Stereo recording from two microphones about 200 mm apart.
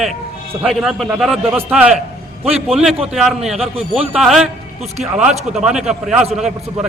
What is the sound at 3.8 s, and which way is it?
Speech, 30° right (ahead or behind).